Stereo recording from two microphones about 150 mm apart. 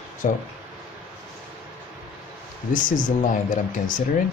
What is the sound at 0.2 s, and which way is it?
Speech, 55° left (ahead or behind).